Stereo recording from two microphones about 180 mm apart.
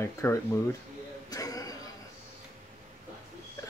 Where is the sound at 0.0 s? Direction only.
15° left (ahead or behind).